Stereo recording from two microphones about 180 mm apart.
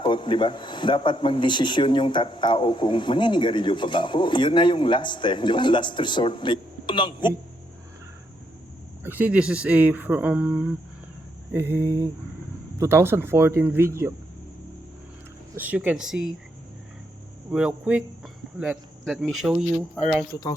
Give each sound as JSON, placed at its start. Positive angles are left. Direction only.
{"t": 0.0, "sound": "speech", "side_deg": 25}
{"t": 9.0, "sound": "speech", "side_deg": -10}
{"t": 15.5, "sound": "speech", "side_deg": -10}
{"t": 17.5, "sound": "speech", "side_deg": -5}